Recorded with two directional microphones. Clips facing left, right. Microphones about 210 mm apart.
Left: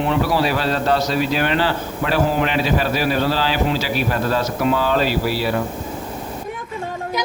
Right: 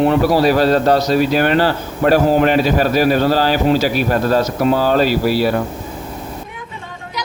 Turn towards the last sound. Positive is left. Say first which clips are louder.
# right 5 dB
turn(degrees=-40)  # may be behind; listen again after turning